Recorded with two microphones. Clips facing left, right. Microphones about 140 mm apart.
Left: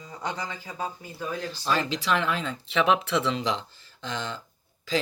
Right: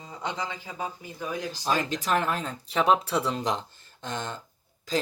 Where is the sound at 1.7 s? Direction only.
45° right (ahead or behind).